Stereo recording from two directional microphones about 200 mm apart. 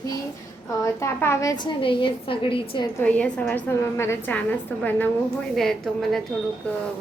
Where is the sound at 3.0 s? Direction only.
5° left (ahead or behind).